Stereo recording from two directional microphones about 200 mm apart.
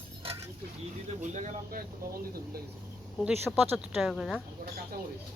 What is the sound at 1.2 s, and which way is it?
Speech, 35° right (ahead or behind).